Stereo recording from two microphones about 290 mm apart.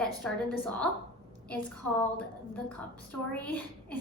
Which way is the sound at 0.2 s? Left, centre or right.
Centre.